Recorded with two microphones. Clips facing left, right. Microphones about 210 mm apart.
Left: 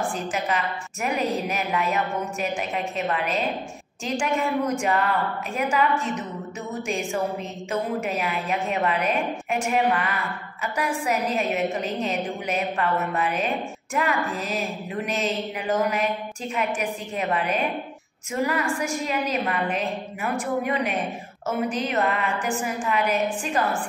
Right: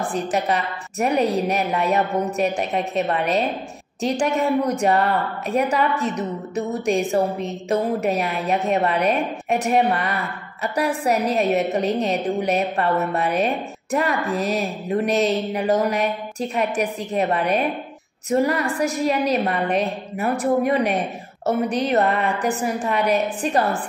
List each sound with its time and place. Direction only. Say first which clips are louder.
0.1 s a woman's voice: right 5 dB; 35° right (ahead or behind)